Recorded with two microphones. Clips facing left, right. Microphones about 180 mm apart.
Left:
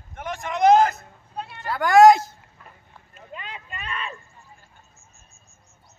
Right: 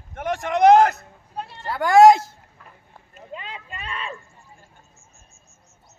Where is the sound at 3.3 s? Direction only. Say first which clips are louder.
Right 2 dB; 30° right (ahead or behind).